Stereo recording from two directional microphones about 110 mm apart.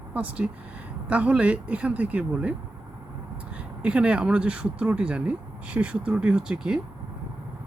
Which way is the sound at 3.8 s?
10° right (ahead or behind).